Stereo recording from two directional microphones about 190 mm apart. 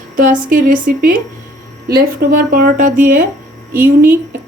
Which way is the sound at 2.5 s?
50° right (ahead or behind).